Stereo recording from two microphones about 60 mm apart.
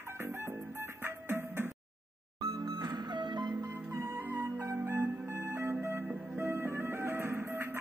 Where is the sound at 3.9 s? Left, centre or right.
Right.